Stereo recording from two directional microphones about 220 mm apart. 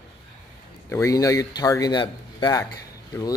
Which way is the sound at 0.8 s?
15° left (ahead or behind).